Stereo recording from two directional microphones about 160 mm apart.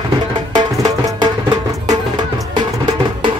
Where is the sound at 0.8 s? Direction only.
25° right (ahead or behind).